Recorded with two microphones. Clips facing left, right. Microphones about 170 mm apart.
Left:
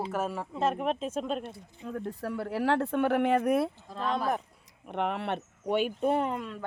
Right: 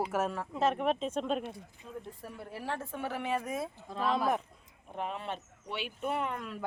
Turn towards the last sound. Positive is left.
turn(degrees=35)  # may be behind; listen again after turning